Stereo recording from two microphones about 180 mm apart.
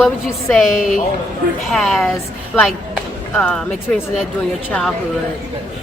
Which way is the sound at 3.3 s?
5° left (ahead or behind).